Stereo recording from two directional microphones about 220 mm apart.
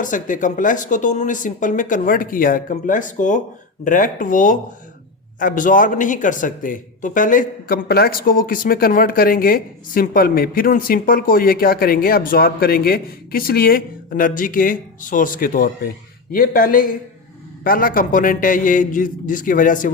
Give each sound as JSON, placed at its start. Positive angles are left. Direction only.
{"t": 0.0, "sound": "speech", "side_deg": 35}